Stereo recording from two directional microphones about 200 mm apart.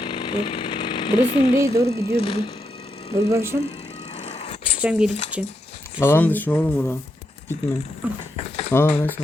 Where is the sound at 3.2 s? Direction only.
15° right (ahead or behind).